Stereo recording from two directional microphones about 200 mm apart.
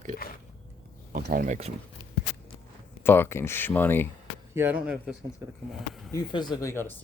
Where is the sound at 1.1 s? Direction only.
45° right (ahead or behind).